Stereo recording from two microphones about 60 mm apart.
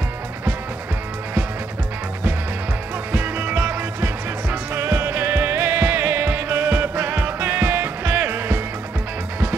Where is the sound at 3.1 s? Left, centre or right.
Right.